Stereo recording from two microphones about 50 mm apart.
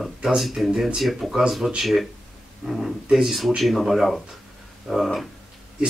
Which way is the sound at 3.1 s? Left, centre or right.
Centre.